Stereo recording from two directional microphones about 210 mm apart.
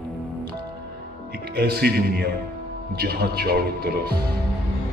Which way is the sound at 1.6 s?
50° right (ahead or behind).